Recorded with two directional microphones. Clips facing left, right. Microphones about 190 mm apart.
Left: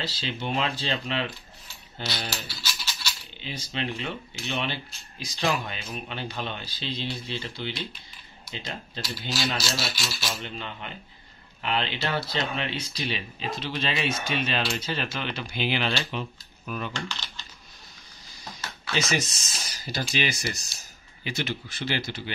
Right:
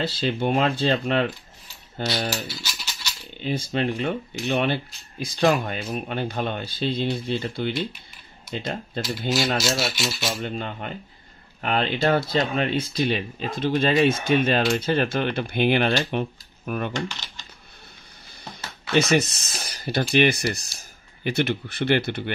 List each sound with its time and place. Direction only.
0.0 s speech: 55° right (ahead or behind)
2.3 s a sound: 15° right (ahead or behind)
3.3 s speech: 50° right (ahead or behind)
17.1 s typing: 15° right (ahead or behind)
18.5 s speech: 60° right (ahead or behind)